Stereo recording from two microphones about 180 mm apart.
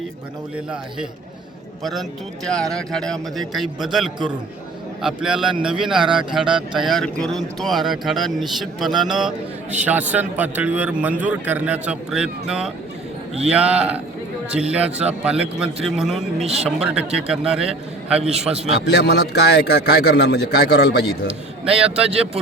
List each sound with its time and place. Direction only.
0.5 s speech: 5° right (ahead or behind)
18.9 s a man's voice: 65° left (ahead or behind)
21.6 s speech: 5° right (ahead or behind)